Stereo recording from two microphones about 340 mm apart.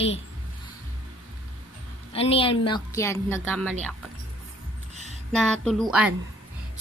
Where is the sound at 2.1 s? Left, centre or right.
Centre.